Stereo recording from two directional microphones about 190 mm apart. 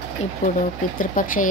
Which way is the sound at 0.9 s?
45° left (ahead or behind).